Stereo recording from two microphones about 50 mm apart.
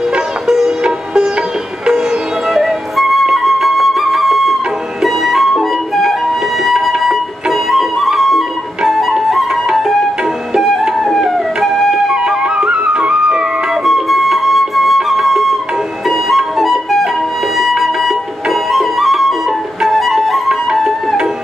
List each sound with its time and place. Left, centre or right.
0.1 s sitar: centre
2.4 s flute: centre
5.0 s music: centre
12.4 s music: centre
13.8 s flute: centre
16.1 s music: centre